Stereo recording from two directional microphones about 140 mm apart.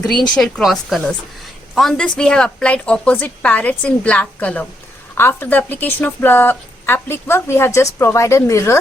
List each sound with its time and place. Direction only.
0.3 s a woman's voice: 5° left (ahead or behind); by 8.8 s 20° left (ahead or behind)